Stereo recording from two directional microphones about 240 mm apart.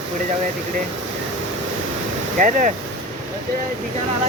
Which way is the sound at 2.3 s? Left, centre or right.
Right.